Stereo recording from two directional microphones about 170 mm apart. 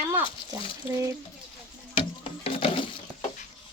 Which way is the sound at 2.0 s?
35° left (ahead or behind).